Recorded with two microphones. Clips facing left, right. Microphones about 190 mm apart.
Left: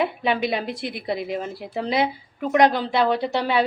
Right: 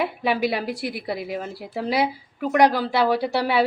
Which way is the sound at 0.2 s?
10° right (ahead or behind).